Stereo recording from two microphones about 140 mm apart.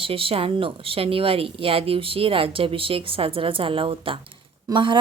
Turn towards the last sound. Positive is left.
turn(degrees=-35)  # may be behind; listen again after turning